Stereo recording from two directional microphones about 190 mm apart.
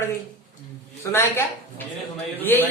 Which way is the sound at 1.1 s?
10° left (ahead or behind).